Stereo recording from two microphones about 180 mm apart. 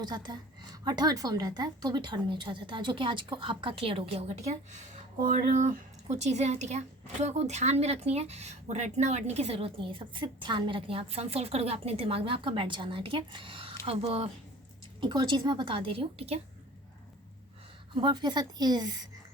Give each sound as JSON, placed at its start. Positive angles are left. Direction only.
{"t": 0.0, "sound": "a woman's voice", "side_deg": -25}
{"t": 17.9, "sound": "a woman's voice", "side_deg": -25}